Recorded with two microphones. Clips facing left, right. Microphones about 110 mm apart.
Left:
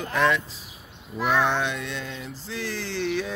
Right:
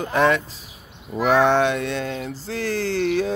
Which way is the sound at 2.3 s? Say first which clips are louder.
Right 7 dB; 45° right (ahead or behind).